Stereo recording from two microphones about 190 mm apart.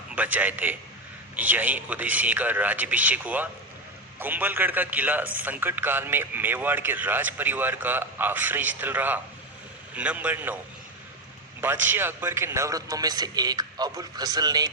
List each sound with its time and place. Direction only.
0.2 s a man's voice: 10° right (ahead or behind)
11.6 s a man's voice: 10° right (ahead or behind)